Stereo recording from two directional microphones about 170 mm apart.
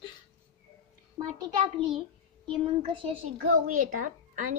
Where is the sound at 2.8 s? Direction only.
30° right (ahead or behind).